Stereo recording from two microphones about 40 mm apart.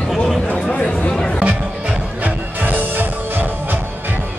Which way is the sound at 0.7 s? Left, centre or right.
Left.